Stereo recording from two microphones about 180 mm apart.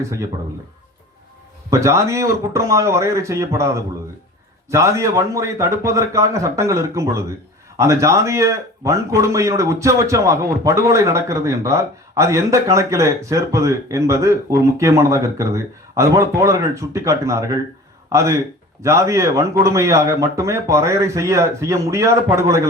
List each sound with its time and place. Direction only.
1.7 s a man's voice: 15° right (ahead or behind)